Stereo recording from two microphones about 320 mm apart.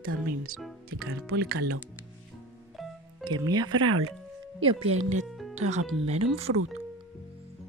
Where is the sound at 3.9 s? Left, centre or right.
Right.